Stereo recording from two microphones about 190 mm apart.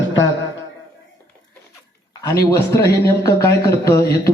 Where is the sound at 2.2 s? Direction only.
15° left (ahead or behind).